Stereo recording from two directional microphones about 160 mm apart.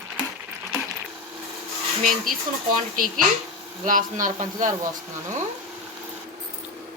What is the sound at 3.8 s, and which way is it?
Speech, 55° right (ahead or behind).